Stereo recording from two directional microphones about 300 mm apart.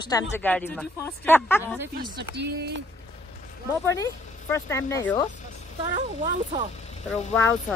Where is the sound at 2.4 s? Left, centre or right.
Right.